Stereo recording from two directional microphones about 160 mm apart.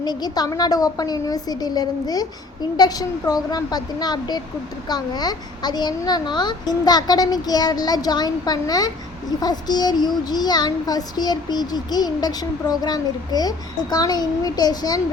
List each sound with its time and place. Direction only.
0.0 s child singing: 25° left (ahead or behind)